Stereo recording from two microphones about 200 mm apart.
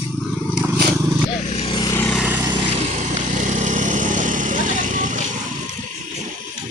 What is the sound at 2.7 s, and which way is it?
Vehicle, 35° right (ahead or behind).